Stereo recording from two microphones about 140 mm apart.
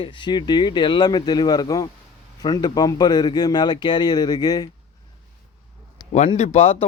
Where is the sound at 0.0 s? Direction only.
35° left (ahead or behind).